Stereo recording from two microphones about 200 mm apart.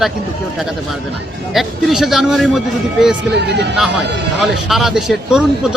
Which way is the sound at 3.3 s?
60° right (ahead or behind).